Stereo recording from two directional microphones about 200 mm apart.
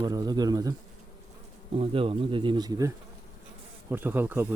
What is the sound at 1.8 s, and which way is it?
Speech, 25° right (ahead or behind).